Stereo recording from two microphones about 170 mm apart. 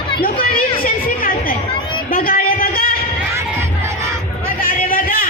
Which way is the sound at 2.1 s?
60° left (ahead or behind).